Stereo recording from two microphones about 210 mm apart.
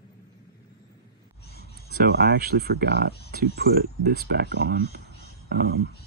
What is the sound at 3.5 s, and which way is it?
Speech, 50° right (ahead or behind).